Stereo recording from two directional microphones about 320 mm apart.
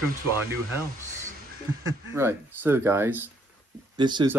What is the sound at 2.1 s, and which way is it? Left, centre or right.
Speech, centre.